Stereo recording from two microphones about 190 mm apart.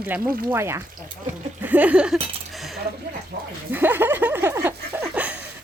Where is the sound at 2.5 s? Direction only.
Centre (ahead or behind).